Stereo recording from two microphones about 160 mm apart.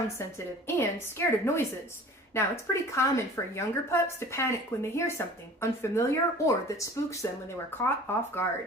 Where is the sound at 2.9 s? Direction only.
20° left (ahead or behind).